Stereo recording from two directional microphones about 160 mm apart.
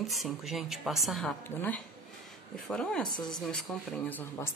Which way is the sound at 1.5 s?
15° left (ahead or behind).